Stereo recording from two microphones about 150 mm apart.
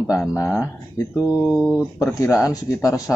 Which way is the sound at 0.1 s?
20° left (ahead or behind).